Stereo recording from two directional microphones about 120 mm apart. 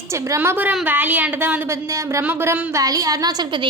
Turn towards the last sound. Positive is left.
turn(degrees=-35)  # may be behind; listen again after turning